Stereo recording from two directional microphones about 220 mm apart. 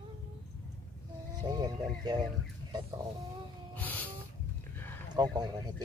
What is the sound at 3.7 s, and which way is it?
Music, 10° left (ahead or behind).